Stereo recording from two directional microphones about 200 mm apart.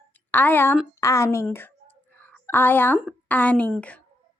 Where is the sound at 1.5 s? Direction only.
10° left (ahead or behind).